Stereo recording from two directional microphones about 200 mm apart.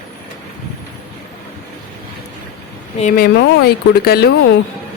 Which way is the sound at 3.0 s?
40° left (ahead or behind).